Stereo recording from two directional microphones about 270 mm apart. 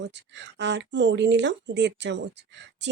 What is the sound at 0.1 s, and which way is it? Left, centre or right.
Speech, right.